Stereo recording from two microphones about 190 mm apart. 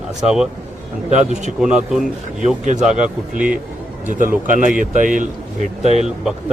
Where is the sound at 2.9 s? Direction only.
45° right (ahead or behind).